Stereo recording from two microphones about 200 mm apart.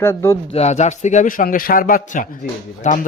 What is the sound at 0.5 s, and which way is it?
A man's voice, 35° left (ahead or behind).